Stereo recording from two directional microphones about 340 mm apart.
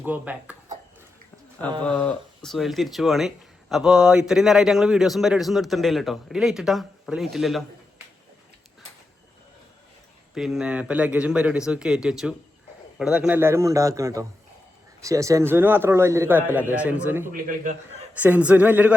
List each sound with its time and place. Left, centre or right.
0.0 s speech: centre
1.8 s speech: centre
10.3 s a man's voice: centre
17.3 s a man's voice: right
18.2 s speech: centre